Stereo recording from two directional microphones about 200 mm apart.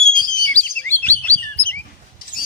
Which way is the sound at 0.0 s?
5° left (ahead or behind).